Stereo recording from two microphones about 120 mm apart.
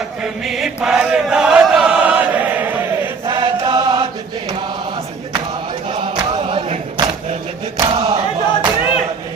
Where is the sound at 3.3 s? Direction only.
40° right (ahead or behind).